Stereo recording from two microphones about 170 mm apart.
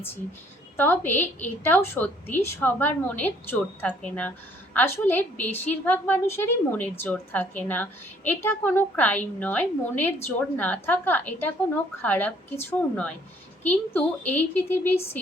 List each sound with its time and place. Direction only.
0.8 s a woman's voice: 10° left (ahead or behind)